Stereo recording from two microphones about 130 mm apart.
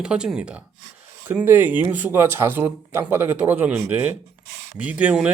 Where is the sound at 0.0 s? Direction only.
5° right (ahead or behind).